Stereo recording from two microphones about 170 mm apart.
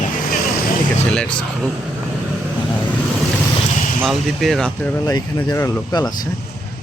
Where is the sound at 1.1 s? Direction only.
5° left (ahead or behind).